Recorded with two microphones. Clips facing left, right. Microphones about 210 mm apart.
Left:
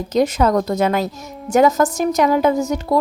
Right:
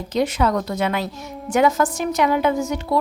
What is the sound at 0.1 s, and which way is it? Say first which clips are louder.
A woman's voice: left 4 dB; 40° left (ahead or behind).